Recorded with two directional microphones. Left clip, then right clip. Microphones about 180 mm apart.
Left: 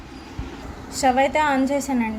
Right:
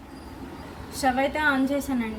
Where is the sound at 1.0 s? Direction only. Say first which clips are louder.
Left 6 dB; 30° left (ahead or behind).